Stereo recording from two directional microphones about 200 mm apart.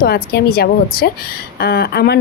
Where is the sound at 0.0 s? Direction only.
50° left (ahead or behind).